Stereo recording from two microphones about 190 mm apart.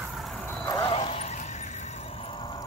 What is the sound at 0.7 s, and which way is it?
Vehicle, 20° left (ahead or behind).